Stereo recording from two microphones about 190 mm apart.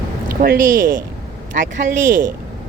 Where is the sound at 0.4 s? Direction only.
50° right (ahead or behind).